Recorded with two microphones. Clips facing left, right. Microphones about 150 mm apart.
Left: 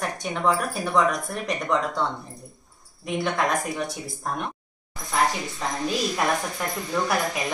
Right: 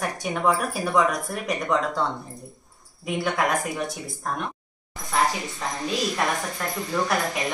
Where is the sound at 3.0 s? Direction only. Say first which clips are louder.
Even; 5° right (ahead or behind).